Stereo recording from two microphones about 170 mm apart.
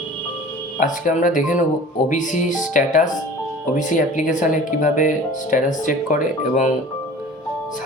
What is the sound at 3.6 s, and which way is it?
Speech, 50° left (ahead or behind).